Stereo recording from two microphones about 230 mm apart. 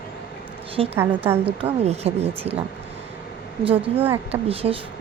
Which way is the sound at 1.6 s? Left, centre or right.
Right.